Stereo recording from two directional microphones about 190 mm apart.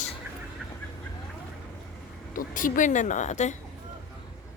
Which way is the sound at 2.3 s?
45° left (ahead or behind).